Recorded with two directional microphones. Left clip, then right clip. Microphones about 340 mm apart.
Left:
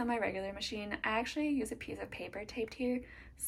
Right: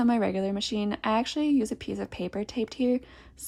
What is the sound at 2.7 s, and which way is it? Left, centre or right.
Speech, right.